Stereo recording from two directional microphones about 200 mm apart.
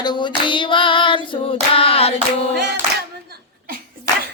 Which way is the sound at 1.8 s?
30° left (ahead or behind).